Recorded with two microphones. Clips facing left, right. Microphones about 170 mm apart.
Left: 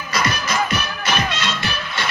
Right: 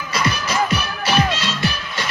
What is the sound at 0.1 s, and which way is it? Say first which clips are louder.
Music: even; 35° right (ahead or behind).